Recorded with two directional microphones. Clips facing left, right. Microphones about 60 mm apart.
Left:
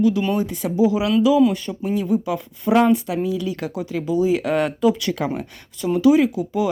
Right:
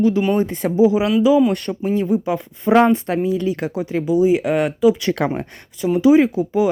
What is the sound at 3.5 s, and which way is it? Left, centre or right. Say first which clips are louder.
Speech: right 4 dB; right.